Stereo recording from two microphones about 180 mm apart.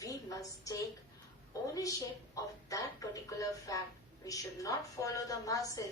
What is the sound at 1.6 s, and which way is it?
A woman's voice, 20° left (ahead or behind).